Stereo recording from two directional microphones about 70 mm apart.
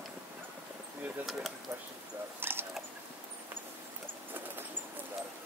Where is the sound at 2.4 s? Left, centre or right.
Right.